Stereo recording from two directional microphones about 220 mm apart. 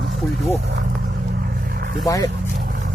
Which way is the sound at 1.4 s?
45° right (ahead or behind).